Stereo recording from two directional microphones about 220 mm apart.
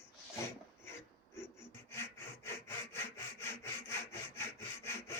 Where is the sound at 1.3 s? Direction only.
10° left (ahead or behind).